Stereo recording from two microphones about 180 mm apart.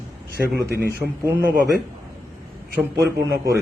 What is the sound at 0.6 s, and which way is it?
Speech, 65° right (ahead or behind).